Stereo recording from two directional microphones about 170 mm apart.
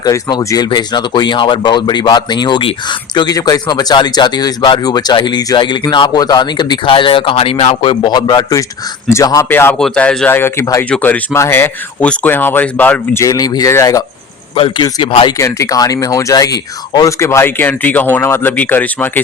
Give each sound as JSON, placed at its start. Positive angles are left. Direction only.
{"t": 0.0, "sound": "speech", "side_deg": 25}
{"t": 14.5, "sound": "a man's voice", "side_deg": 35}
{"t": 14.8, "sound": "speech", "side_deg": 25}